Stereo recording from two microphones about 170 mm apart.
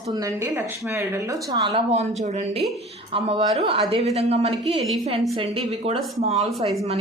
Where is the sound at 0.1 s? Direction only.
20° right (ahead or behind).